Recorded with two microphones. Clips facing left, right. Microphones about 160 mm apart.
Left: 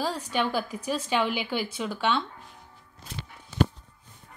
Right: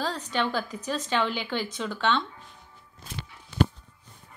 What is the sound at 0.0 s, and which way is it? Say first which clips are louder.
Speech: left 1 dB; 10° left (ahead or behind).